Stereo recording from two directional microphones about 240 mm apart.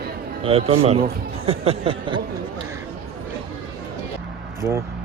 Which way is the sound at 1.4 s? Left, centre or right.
Right.